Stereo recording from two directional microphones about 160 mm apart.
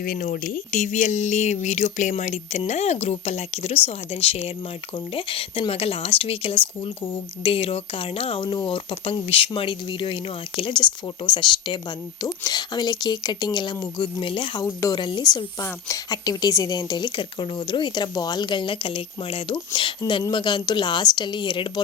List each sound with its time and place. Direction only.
0.0 s speech: 55° left (ahead or behind); by 14.6 s 35° left (ahead or behind)
14.6 s speech: 20° left (ahead or behind)